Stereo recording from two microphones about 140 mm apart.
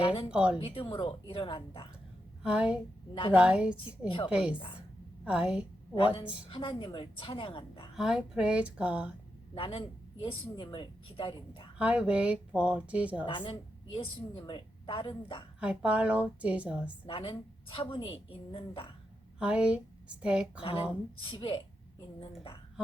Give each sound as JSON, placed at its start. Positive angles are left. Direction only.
{"t": 0.0, "sound": "speech", "side_deg": 40}
{"t": 0.3, "sound": "speech", "side_deg": -5}
{"t": 0.6, "sound": "a woman's voice", "side_deg": 40}
{"t": 2.4, "sound": "a woman's voice", "side_deg": -5}
{"t": 6.5, "sound": "a woman's voice", "side_deg": 40}
{"t": 7.9, "sound": "speech", "side_deg": -5}
{"t": 9.6, "sound": "a woman's voice", "side_deg": 40}
{"t": 11.8, "sound": "speech", "side_deg": -10}
{"t": 13.2, "sound": "a woman's voice", "side_deg": 35}
{"t": 15.6, "sound": "speech", "side_deg": -10}
{"t": 17.1, "sound": "a woman's voice", "side_deg": 40}
{"t": 19.4, "sound": "a woman's voice", "side_deg": -5}
{"t": 20.6, "sound": "a woman's voice", "side_deg": 40}